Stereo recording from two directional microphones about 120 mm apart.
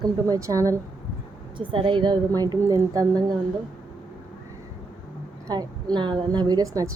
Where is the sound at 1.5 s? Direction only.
45° right (ahead or behind).